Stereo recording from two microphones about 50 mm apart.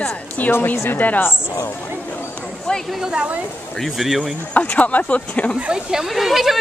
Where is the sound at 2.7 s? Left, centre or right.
Centre.